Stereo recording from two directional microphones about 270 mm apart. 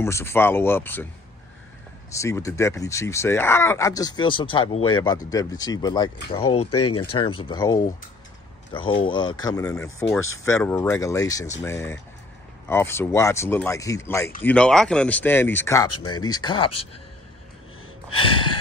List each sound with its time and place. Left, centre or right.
0.0 s speech: centre
2.1 s speech: centre
6.7 s speech: left
7.0 s speech: centre
18.1 s gasp: centre